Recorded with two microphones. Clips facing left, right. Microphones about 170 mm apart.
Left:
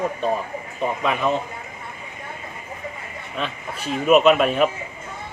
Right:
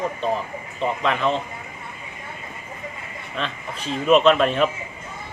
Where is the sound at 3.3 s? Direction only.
10° left (ahead or behind).